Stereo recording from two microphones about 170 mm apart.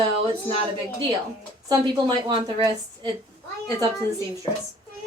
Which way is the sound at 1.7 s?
25° right (ahead or behind).